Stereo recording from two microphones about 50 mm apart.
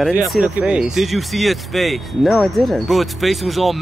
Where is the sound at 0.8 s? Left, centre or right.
Centre.